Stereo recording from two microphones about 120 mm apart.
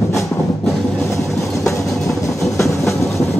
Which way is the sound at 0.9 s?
25° left (ahead or behind).